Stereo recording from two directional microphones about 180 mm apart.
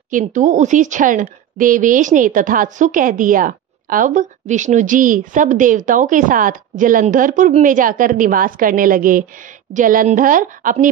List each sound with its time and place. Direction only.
0.1 s a woman's voice: 45° right (ahead or behind)